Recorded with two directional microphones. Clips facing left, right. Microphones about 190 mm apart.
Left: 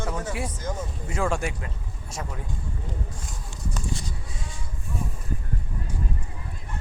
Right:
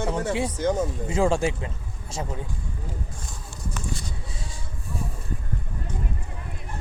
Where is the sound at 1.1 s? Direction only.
30° right (ahead or behind).